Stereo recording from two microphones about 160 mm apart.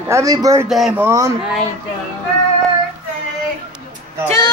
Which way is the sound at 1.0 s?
20° right (ahead or behind).